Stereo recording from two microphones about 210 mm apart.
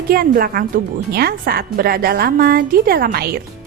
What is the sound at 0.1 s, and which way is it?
A woman's voice, 45° right (ahead or behind).